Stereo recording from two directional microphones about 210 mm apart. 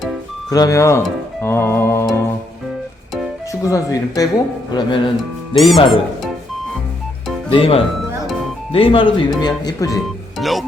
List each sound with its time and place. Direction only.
0.5 s speech: 15° left (ahead or behind)
3.5 s speech: 15° left (ahead or behind)
5.5 s speech: centre (ahead or behind)
7.5 s speech: 25° left (ahead or behind)
10.3 s speech: centre (ahead or behind)